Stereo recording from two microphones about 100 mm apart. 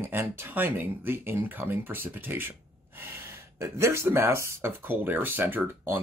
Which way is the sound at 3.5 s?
30° right (ahead or behind).